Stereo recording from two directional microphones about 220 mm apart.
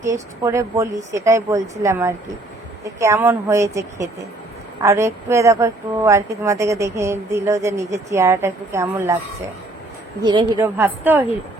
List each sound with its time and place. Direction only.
0.0 s speech: 15° right (ahead or behind)
10.2 s a woman's voice: 20° right (ahead or behind)
10.6 s speech: 10° right (ahead or behind)